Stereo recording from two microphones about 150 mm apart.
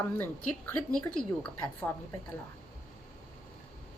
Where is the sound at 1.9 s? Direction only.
10° left (ahead or behind).